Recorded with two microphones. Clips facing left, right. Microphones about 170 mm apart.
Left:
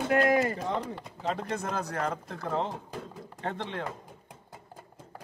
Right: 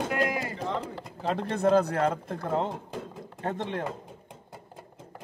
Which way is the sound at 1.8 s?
60° right (ahead or behind).